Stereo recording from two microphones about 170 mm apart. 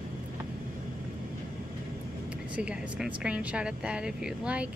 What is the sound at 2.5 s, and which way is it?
A woman's voice, 5° right (ahead or behind).